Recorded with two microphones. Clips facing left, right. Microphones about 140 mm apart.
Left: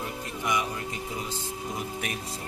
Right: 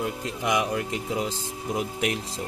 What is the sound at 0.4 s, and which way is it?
Speech, 90° right.